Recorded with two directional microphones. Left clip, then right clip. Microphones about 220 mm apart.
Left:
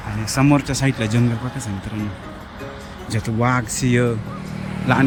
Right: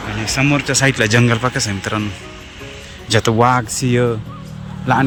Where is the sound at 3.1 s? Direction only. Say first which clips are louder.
Right 8 dB; 5° right (ahead or behind).